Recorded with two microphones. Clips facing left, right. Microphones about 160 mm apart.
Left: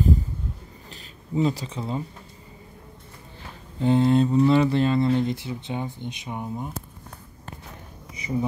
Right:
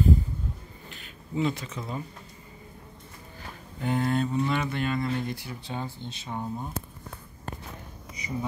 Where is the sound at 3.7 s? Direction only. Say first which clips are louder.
Left 7 dB; 25° left (ahead or behind).